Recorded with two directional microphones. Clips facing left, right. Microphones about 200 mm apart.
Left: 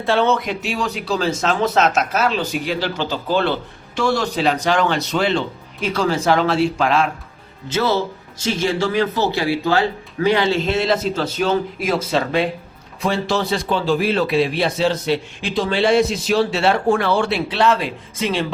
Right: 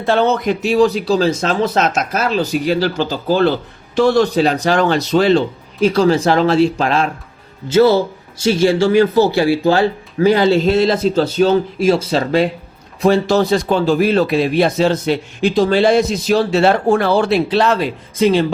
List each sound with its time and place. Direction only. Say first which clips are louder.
0.1 s speech: right 3 dB; 40° right (ahead or behind)
10.2 s speech: right 5 dB; 40° right (ahead or behind)